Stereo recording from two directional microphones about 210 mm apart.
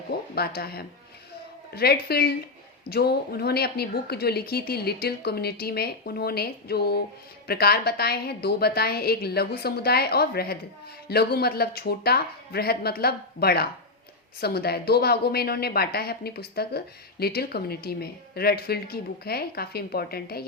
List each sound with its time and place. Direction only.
0.3 s a woman's voice: 45° left (ahead or behind)